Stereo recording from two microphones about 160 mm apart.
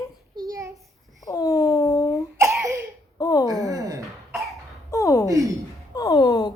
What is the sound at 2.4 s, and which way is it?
Cough, 20° right (ahead or behind).